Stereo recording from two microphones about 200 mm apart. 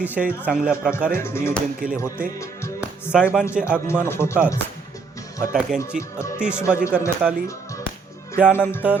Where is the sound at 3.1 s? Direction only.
5° right (ahead or behind).